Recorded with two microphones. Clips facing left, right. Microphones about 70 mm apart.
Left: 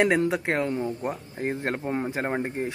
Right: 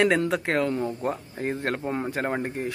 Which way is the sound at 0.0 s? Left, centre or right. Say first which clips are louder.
Even; left.